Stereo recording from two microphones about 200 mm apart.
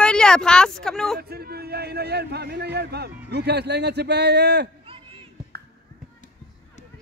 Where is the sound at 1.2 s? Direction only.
50° right (ahead or behind).